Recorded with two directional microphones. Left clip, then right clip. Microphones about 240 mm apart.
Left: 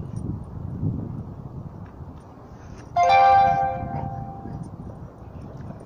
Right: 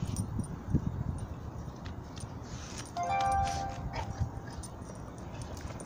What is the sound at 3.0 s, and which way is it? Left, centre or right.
Music, left.